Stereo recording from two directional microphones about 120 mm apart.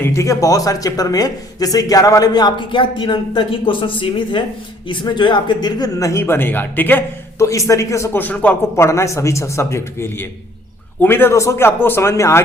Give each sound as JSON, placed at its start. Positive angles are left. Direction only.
{"t": 0.0, "sound": "speech", "side_deg": 25}
{"t": 8.7, "sound": "speech", "side_deg": 25}